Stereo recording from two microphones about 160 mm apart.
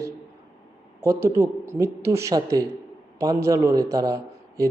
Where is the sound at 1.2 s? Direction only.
20° right (ahead or behind).